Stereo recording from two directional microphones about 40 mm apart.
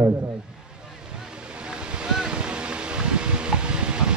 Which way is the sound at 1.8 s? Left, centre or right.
Right.